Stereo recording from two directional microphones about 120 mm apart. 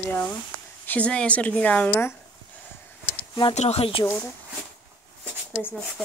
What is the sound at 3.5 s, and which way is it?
Speech, 65° left (ahead or behind).